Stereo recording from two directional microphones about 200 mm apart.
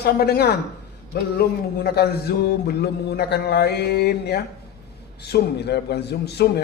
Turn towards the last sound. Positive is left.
turn(degrees=55)  # may be behind; listen again after turning